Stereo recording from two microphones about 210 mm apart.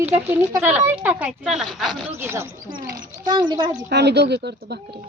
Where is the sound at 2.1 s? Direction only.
10° right (ahead or behind).